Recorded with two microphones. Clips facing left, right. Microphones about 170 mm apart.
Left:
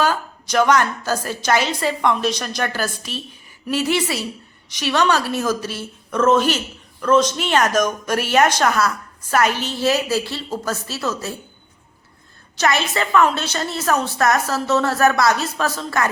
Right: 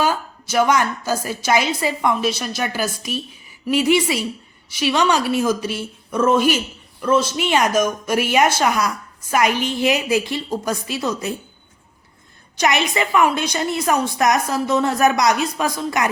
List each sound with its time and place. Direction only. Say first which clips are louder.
0.0 s speech: even; 10° right (ahead or behind)
12.5 s speech: right 1 dB; 15° right (ahead or behind)